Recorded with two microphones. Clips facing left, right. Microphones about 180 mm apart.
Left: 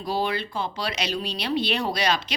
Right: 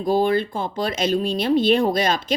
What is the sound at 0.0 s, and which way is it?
A woman's voice, 50° right (ahead or behind).